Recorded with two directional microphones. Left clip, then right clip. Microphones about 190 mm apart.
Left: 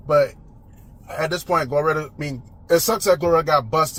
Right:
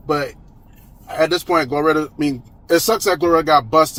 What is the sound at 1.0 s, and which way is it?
Speech, 35° right (ahead or behind).